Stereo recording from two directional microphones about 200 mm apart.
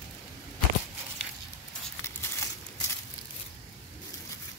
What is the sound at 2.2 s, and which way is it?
Crumpling, 15° left (ahead or behind).